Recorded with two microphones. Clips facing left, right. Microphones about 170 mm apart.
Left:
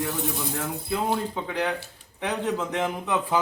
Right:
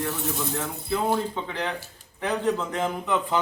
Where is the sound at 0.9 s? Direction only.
10° left (ahead or behind).